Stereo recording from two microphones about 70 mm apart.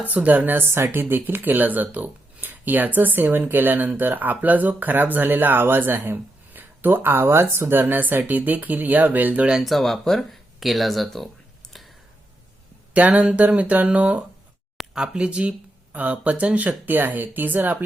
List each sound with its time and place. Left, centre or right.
0.1 s speech: right
9.6 s speech: centre
11.7 s a sound: centre
12.9 s speech: right